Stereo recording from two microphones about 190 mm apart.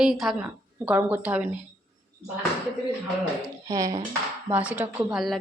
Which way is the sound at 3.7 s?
15° right (ahead or behind).